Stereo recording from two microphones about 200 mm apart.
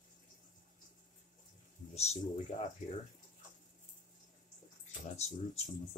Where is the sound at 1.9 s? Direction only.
30° left (ahead or behind).